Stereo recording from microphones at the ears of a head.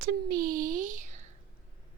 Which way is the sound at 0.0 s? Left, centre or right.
Right.